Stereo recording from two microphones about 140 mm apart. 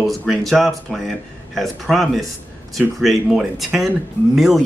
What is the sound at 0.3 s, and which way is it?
Speech, centre (ahead or behind).